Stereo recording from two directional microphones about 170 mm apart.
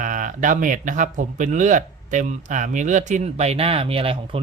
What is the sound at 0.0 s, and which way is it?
Speech, 50° right (ahead or behind).